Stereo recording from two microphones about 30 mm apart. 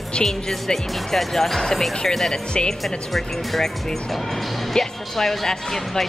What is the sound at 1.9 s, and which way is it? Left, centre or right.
Speech, left.